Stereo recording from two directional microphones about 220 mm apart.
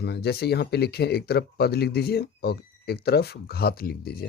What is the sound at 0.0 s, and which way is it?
Speech, 50° left (ahead or behind).